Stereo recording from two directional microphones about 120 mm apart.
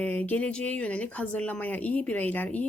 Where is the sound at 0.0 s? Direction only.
15° left (ahead or behind).